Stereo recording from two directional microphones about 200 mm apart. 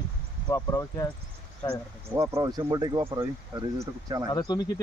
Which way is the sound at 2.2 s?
15° right (ahead or behind).